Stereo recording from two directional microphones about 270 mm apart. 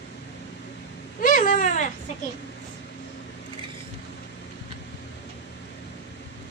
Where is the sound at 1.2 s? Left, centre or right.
Left.